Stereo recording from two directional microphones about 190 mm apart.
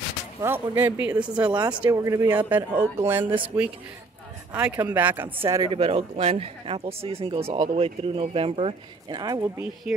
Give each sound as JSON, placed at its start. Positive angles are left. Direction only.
{"t": 0.4, "sound": "speech", "side_deg": -10}
{"t": 5.5, "sound": "speech", "side_deg": -20}